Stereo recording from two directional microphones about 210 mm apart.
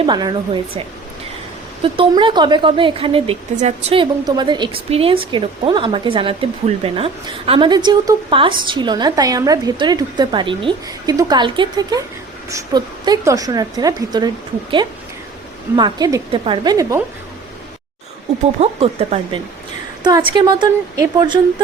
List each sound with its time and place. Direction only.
0.0 s speech: 20° right (ahead or behind)
1.8 s speech: 25° right (ahead or behind)
15.7 s speech: 20° right (ahead or behind)
18.6 s speech: 30° right (ahead or behind)